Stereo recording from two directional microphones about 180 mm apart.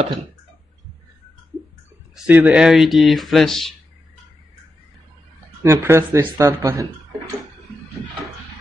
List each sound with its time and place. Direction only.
2.1 s speech: 10° right (ahead or behind)
5.6 s speech: 15° right (ahead or behind)